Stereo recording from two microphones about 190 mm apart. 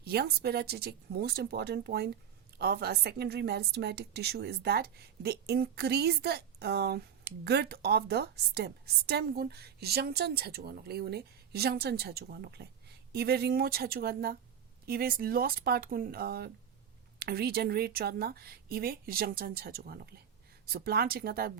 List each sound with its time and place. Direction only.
0.0 s a woman's voice: 55° right (ahead or behind)